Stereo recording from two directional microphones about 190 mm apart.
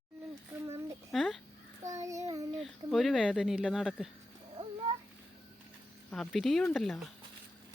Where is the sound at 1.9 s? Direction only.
15° right (ahead or behind).